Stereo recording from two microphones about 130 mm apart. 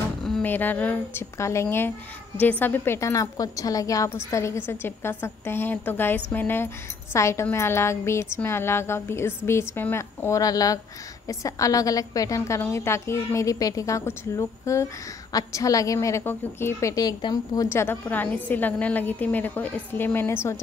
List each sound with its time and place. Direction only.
0.2 s a sound: 5° left (ahead or behind)
0.5 s a woman's voice: 15° left (ahead or behind); by 17.6 s 30° left (ahead or behind)
17.6 s a woman's voice: 15° left (ahead or behind)